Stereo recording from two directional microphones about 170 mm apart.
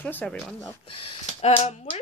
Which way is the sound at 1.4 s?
35° left (ahead or behind).